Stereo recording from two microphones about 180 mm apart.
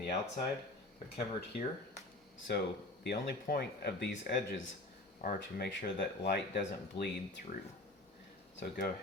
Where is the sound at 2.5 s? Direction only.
65° left (ahead or behind); by 5.4 s 45° left (ahead or behind).